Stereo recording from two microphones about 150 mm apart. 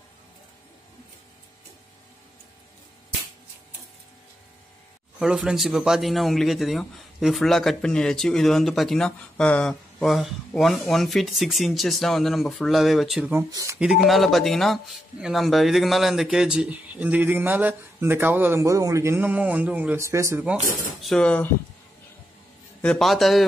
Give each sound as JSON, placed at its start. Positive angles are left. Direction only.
{"t": 5.2, "sound": "a man's voice", "side_deg": -5}
{"t": 13.3, "sound": "speech", "side_deg": -20}
{"t": 13.7, "sound": "speech", "side_deg": -5}
{"t": 21.0, "sound": "speech", "side_deg": 5}
{"t": 22.8, "sound": "a man's voice", "side_deg": 5}